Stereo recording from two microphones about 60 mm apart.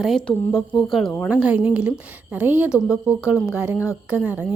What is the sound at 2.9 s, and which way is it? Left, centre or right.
A woman's voice, centre.